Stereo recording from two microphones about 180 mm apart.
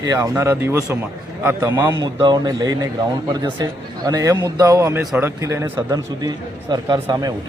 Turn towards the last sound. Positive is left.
turn(degrees=-20)  # may be behind; listen again after turning